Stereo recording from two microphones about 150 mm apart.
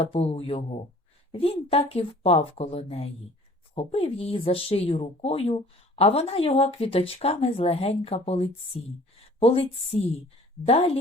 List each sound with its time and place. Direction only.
0.0 s speech: 40° left (ahead or behind)